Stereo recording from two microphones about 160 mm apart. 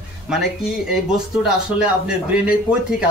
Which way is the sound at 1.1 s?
5° right (ahead or behind).